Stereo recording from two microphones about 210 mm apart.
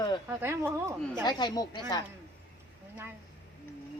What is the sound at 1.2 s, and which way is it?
Speech, 20° left (ahead or behind).